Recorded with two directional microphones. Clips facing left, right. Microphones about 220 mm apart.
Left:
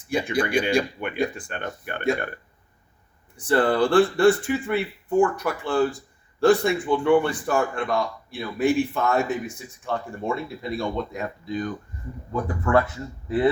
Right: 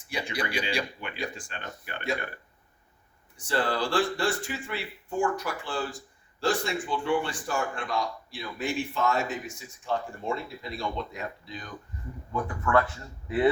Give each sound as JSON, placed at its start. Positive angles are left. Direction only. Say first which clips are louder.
{"t": 0.1, "sound": "speech", "louder": "left 9 dB", "side_deg": 50}
{"t": 3.3, "sound": "speech", "louder": "left 8 dB", "side_deg": 55}
{"t": 12.3, "sound": "speech", "louder": "left 4 dB", "side_deg": 30}